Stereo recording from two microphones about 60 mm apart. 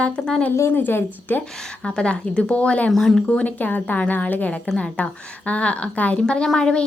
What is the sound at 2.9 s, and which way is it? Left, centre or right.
Speech, centre.